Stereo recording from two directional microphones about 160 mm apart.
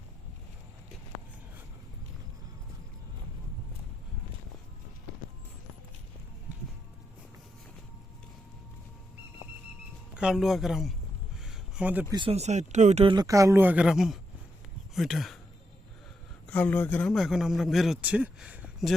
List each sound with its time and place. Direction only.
10.2 s a man's voice: 5° right (ahead or behind)
11.4 s a sound: 5° right (ahead or behind)
12.1 s speech: 35° right (ahead or behind)
13.1 s speech: 20° right (ahead or behind); by 15.4 s centre (ahead or behind)
16.5 s speech: 10° left (ahead or behind)
17.1 s a man's voice: centre (ahead or behind)